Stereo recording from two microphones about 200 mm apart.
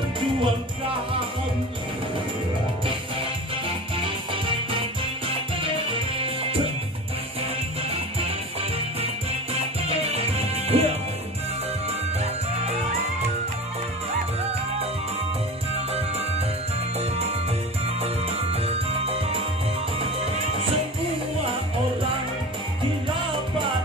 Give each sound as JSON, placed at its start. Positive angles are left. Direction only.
{"t": 6.2, "sound": "music", "side_deg": -30}
{"t": 9.5, "sound": "music", "side_deg": -30}
{"t": 18.0, "sound": "music", "side_deg": -30}